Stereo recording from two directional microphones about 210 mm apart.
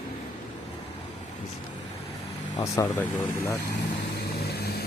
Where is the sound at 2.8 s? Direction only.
15° left (ahead or behind).